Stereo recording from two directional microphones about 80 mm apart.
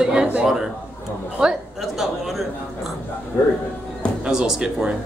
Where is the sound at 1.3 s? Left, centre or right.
Centre.